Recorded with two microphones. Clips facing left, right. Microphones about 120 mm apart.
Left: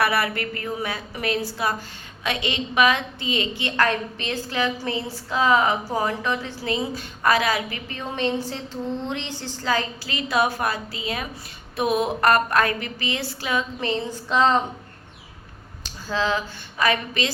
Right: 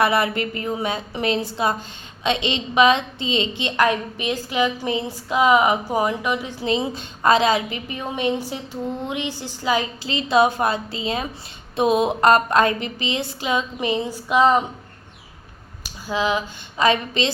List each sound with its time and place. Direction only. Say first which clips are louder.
0.0 s a woman's voice: right 3 dB; 20° right (ahead or behind)
15.8 s speech: right 2 dB; 15° right (ahead or behind)